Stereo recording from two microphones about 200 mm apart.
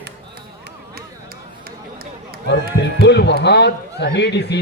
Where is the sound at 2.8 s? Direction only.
60° left (ahead or behind).